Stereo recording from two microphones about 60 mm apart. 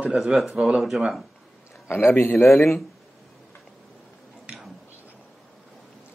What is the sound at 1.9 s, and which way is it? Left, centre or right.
Speech, left.